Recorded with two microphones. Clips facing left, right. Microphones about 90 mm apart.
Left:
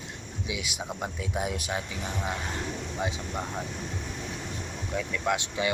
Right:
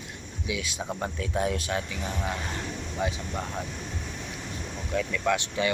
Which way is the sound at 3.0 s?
20° left (ahead or behind).